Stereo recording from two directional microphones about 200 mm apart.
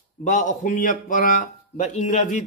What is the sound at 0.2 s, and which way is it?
A man's voice, 40° left (ahead or behind).